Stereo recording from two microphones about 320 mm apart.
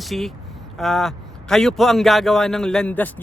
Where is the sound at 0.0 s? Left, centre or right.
Centre.